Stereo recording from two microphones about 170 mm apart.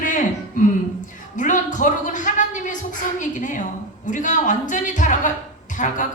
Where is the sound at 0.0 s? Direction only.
50° left (ahead or behind).